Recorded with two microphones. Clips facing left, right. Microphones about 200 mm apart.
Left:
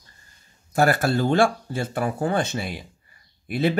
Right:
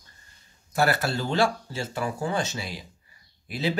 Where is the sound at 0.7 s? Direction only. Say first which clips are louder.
Left 4 dB; 45° left (ahead or behind).